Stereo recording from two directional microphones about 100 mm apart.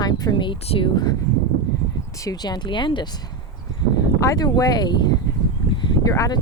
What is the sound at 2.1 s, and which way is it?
Speech, 35° left (ahead or behind).